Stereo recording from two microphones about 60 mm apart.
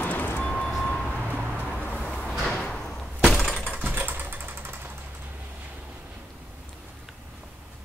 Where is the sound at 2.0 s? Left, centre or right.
Centre.